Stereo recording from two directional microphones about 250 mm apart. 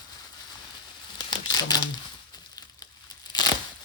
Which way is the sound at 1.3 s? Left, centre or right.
Centre.